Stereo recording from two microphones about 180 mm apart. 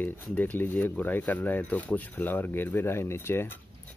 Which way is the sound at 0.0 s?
10° left (ahead or behind).